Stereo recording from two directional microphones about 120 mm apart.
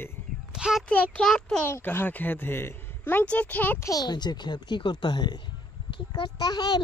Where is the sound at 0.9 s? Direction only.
10° left (ahead or behind).